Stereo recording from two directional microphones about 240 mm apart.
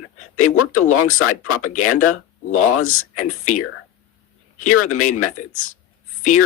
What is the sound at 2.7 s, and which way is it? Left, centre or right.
Speech, left.